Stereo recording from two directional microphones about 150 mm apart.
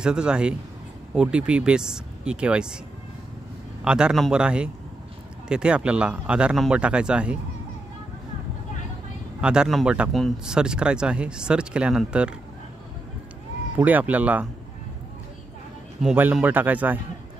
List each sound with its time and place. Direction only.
0.0 s speech: 5° right (ahead or behind)
3.8 s speech: 5° right (ahead or behind)
9.4 s speech: 5° right (ahead or behind)
13.7 s speech: 10° right (ahead or behind)
16.0 s speech: 5° right (ahead or behind)